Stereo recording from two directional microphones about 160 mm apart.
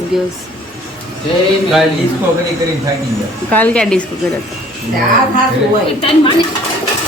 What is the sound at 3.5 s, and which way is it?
Speech, 10° left (ahead or behind).